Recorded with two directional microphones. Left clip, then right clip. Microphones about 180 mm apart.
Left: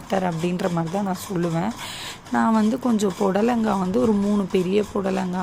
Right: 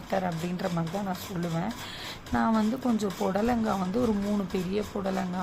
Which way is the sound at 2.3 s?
15° left (ahead or behind).